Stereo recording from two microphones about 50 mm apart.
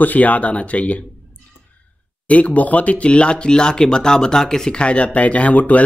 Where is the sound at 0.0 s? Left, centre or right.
Left.